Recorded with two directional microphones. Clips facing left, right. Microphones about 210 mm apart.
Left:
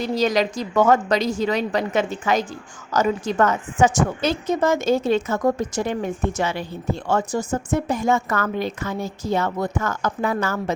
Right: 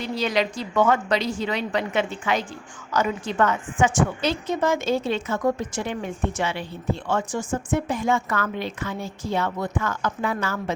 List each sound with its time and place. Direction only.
0.0 s a woman's voice: 40° left (ahead or behind)